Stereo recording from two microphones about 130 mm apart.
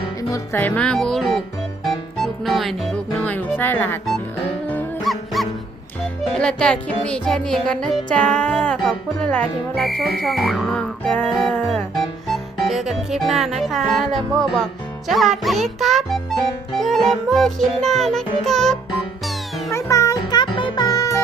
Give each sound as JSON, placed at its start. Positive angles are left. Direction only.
{"t": 0.2, "sound": "music", "side_deg": 25}
{"t": 0.6, "sound": "music", "side_deg": 5}
{"t": 3.2, "sound": "speech", "side_deg": 15}
{"t": 5.0, "sound": "music", "side_deg": 0}
{"t": 19.7, "sound": "music", "side_deg": 25}